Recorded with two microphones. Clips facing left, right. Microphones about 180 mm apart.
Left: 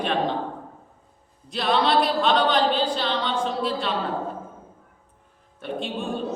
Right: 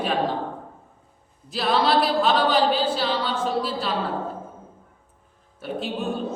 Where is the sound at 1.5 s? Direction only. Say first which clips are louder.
Even; centre (ahead or behind).